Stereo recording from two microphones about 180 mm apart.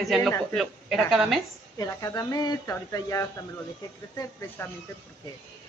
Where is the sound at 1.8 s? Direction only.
20° left (ahead or behind).